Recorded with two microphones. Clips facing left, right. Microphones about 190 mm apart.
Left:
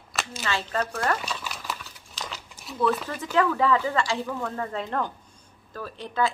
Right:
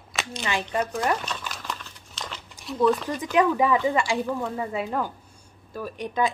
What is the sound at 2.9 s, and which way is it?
Speech, 5° left (ahead or behind).